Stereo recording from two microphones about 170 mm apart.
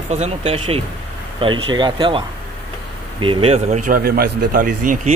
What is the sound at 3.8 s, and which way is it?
A man's voice, 60° right (ahead or behind).